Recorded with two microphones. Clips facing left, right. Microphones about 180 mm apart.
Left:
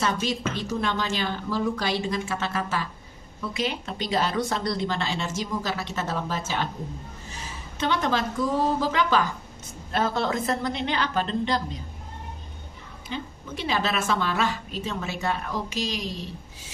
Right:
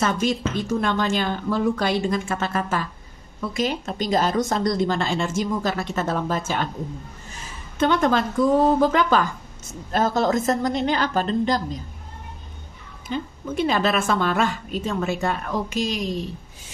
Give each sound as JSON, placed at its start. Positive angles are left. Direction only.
{"t": 0.0, "sound": "a woman's voice", "side_deg": -50}
{"t": 7.8, "sound": "a woman's voice", "side_deg": -50}
{"t": 13.1, "sound": "a woman's voice", "side_deg": -50}